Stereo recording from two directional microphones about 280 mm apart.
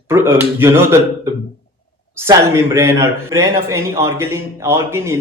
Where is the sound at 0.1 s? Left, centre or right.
Centre.